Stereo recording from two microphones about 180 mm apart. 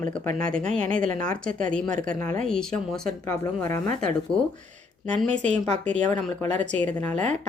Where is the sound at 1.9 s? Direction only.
50° right (ahead or behind).